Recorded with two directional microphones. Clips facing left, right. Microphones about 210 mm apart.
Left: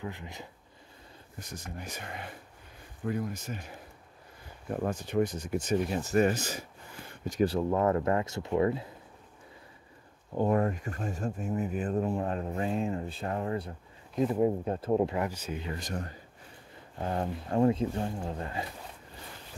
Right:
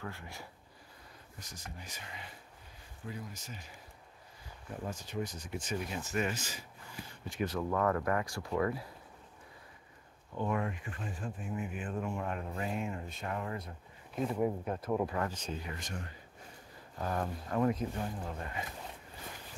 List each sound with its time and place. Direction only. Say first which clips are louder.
0.0 s speech: left 5 dB; 20° left (ahead or behind)
1.4 s speech: left 8 dB; 55° left (ahead or behind); by 8.8 s 25° left (ahead or behind)
10.3 s speech: left 8 dB; 40° left (ahead or behind)
15.1 s speech: left 4 dB; 10° left (ahead or behind)
15.6 s speech: left 6 dB; 35° left (ahead or behind)
17.0 s speech: left 3 dB; 25° left (ahead or behind)